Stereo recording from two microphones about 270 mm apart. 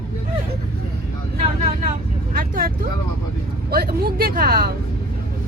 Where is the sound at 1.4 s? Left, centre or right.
Right.